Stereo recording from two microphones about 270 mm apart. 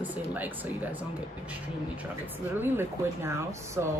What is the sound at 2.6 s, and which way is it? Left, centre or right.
A woman's voice, centre.